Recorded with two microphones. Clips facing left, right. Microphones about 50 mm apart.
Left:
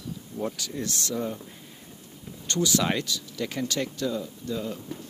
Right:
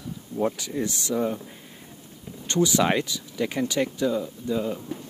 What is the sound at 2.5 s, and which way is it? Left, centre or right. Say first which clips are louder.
Speech: right 4 dB; centre.